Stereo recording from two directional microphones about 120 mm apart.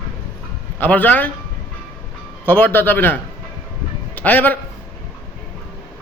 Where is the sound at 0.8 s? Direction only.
15° left (ahead or behind).